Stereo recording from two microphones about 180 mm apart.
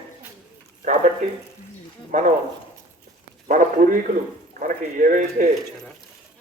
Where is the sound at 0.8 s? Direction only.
45° right (ahead or behind).